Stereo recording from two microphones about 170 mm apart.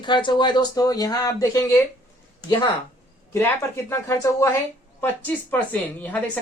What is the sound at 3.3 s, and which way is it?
A woman's voice, 15° left (ahead or behind).